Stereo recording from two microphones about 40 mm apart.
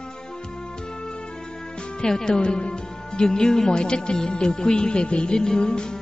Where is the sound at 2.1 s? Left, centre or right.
Centre.